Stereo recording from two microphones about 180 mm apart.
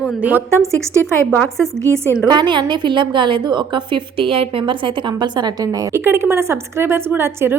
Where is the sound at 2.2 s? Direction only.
25° right (ahead or behind).